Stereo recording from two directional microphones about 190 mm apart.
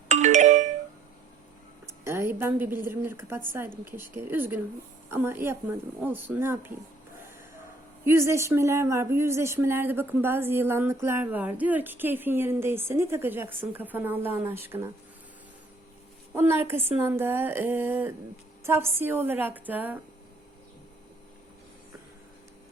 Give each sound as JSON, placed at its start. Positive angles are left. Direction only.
{"t": 0.1, "sound": "music", "side_deg": -40}
{"t": 1.9, "sound": "a woman's voice", "side_deg": -15}
{"t": 8.0, "sound": "a woman's voice", "side_deg": -15}
{"t": 16.3, "sound": "a woman's voice", "side_deg": -10}